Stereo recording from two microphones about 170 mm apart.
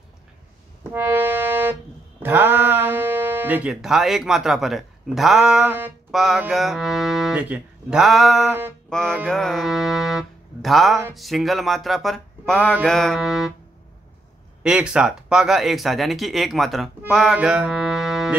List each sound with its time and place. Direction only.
0.9 s music: 15° right (ahead or behind)
2.2 s speech: 10° right (ahead or behind)
14.6 s speech: 5° right (ahead or behind)
17.1 s music: centre (ahead or behind)